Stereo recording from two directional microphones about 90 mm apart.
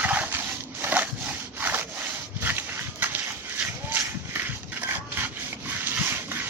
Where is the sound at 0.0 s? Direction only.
20° right (ahead or behind).